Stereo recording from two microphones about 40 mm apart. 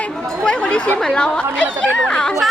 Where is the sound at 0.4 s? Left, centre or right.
Left.